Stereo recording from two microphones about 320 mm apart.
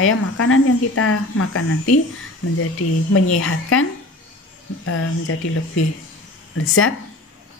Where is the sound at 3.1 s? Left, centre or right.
Left.